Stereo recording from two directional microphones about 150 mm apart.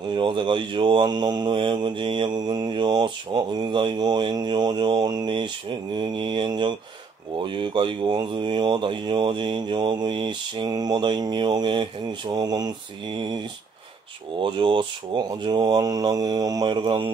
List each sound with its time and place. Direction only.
0.1 s mantra: 30° right (ahead or behind)
14.4 s speech: 30° right (ahead or behind)